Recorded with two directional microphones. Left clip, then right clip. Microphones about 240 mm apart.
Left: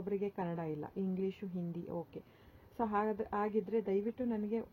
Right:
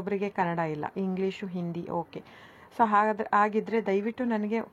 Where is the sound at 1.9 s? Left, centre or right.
Centre.